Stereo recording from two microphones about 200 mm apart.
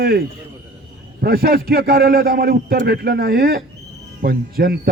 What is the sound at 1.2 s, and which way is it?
Speech, 50° right (ahead or behind).